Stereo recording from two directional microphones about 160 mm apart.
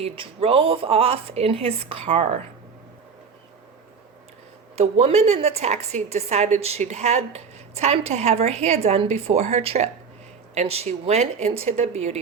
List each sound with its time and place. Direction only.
0.0 s speech: 40° right (ahead or behind)
4.8 s a woman's voice: 40° right (ahead or behind)